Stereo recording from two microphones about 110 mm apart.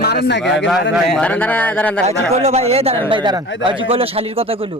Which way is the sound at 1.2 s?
15° left (ahead or behind).